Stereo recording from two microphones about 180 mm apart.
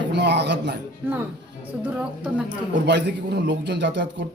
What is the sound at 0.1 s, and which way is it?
Speech, 70° right (ahead or behind).